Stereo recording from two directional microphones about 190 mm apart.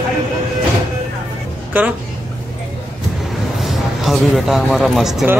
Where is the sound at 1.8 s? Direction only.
10° right (ahead or behind).